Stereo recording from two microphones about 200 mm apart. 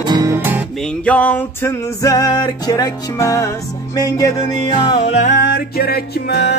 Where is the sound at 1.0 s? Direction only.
5° left (ahead or behind).